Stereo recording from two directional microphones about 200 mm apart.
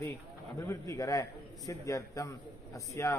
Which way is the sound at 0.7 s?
15° left (ahead or behind).